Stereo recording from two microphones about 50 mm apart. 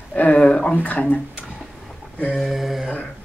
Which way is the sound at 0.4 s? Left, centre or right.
Centre.